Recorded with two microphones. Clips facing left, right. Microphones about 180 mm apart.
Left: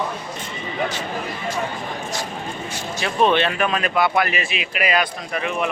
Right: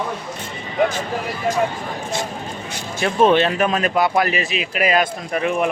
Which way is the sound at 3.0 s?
50° right (ahead or behind).